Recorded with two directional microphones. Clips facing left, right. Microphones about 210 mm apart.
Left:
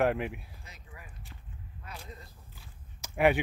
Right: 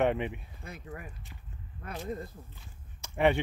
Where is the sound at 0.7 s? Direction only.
55° right (ahead or behind).